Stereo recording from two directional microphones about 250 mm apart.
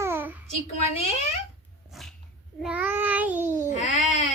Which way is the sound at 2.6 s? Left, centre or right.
Centre.